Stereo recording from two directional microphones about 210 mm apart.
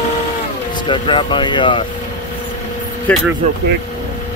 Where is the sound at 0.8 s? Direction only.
25° left (ahead or behind).